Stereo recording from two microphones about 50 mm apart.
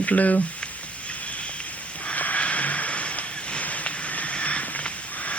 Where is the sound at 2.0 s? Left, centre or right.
Left.